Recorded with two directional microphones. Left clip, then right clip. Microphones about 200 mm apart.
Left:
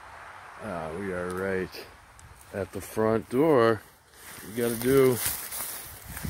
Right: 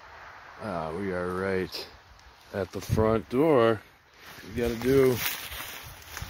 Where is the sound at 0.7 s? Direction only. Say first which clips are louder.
Right 2 dB; 25° right (ahead or behind).